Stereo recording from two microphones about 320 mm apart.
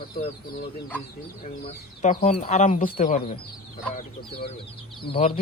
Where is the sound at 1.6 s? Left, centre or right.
Left.